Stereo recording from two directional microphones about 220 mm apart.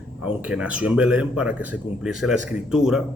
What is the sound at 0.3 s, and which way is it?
A man's voice, 5° right (ahead or behind).